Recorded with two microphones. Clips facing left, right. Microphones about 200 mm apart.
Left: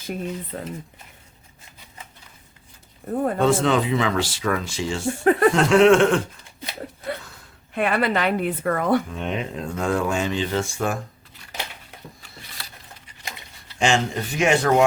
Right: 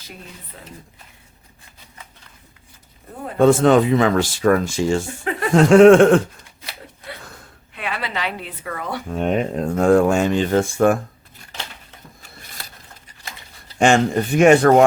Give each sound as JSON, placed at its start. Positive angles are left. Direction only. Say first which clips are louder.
{"t": 0.5, "sound": "a woman's voice", "louder": "left 10 dB", "side_deg": 50}
{"t": 3.3, "sound": "speech", "louder": "right 8 dB", "side_deg": -50}
{"t": 7.7, "sound": "a woman's voice", "louder": "left 7 dB", "side_deg": 50}
{"t": 9.0, "sound": "speech", "louder": "right 7 dB", "side_deg": -45}
{"t": 13.7, "sound": "speech", "louder": "right 6 dB", "side_deg": -55}